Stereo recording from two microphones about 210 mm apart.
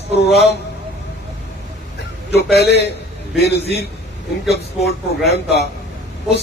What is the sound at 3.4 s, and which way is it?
A man's voice, 50° left (ahead or behind).